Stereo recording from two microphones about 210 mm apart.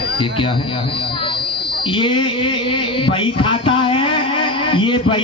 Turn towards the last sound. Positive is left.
turn(degrees=25)  # may be behind; listen again after turning